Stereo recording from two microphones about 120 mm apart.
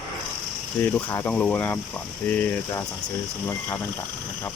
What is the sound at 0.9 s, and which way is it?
Speech, 15° left (ahead or behind).